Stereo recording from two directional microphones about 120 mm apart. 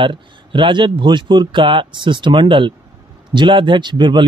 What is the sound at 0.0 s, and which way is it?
Speech, 45° right (ahead or behind).